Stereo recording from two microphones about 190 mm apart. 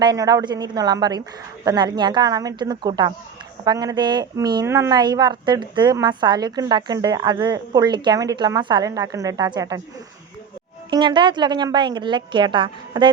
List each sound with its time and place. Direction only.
0.0 s a woman's voice: 20° right (ahead or behind)
10.9 s a woman's voice: 25° right (ahead or behind)